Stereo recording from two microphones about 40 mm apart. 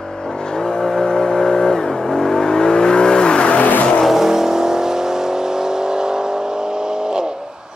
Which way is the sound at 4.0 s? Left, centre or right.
Centre.